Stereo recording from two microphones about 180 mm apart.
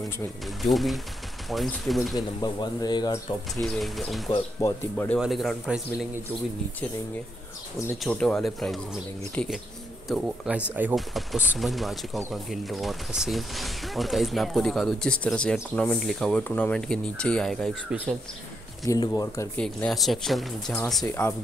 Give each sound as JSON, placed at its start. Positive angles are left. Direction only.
{"t": 0.6, "sound": "speech", "side_deg": 0}
{"t": 2.1, "sound": "speech", "side_deg": 20}
{"t": 3.6, "sound": "speech", "side_deg": 0}
{"t": 4.6, "sound": "speech", "side_deg": 15}
{"t": 8.0, "sound": "speech", "side_deg": 5}
{"t": 18.9, "sound": "speech", "side_deg": 20}
{"t": 19.5, "sound": "speech", "side_deg": 5}
{"t": 21.0, "sound": "speech", "side_deg": 15}